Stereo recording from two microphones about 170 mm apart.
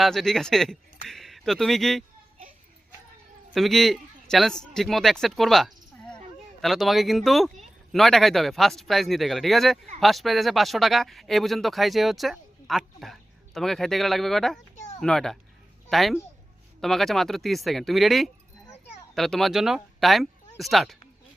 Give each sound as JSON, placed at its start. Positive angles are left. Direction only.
{"t": 0.0, "sound": "speech", "side_deg": 0}
{"t": 3.5, "sound": "a man's voice", "side_deg": 0}
{"t": 14.8, "sound": "a sound", "side_deg": 45}
{"t": 15.0, "sound": "speech", "side_deg": 5}